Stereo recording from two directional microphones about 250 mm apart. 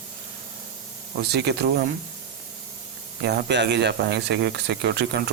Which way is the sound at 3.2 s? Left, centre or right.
Right.